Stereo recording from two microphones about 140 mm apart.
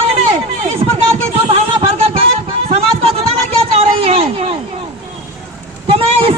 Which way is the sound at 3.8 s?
45° right (ahead or behind).